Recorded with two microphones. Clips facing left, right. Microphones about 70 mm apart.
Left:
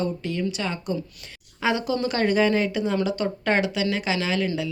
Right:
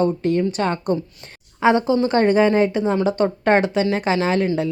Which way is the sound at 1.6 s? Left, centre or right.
Right.